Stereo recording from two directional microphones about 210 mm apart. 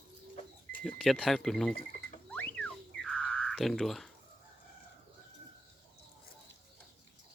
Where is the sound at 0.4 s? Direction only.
30° left (ahead or behind).